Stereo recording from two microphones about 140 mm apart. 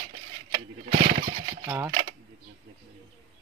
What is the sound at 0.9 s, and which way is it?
Speech, 70° right (ahead or behind).